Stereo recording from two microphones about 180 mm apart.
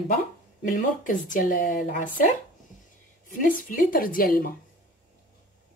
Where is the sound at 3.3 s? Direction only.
50° left (ahead or behind).